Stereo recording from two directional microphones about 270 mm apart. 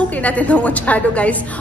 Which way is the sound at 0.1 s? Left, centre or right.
Centre.